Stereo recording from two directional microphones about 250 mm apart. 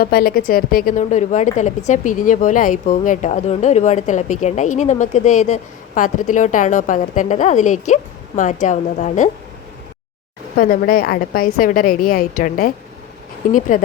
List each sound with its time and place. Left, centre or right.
0.0 s a woman's voice: left
10.6 s a woman's voice: left
13.7 s a woman's voice: left